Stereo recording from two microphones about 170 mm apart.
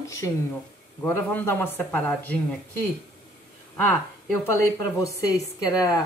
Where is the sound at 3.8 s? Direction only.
15° left (ahead or behind).